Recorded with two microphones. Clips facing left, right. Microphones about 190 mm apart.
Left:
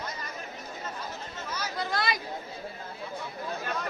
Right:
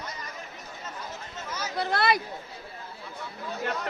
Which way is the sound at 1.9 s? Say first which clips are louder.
Right 6 dB; 65° right (ahead or behind).